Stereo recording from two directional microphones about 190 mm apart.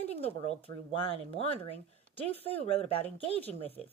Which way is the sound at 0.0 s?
35° left (ahead or behind).